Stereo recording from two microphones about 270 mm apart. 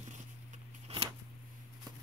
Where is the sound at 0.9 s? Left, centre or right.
Right.